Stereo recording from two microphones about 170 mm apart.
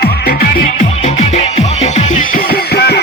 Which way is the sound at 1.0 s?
40° left (ahead or behind).